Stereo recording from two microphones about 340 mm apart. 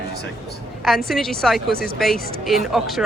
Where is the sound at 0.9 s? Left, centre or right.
Centre.